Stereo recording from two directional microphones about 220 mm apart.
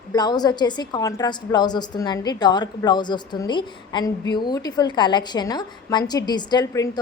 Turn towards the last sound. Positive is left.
turn(degrees=15)  # may be behind; listen again after turning